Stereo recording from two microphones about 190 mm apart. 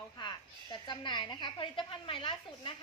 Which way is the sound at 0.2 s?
25° left (ahead or behind).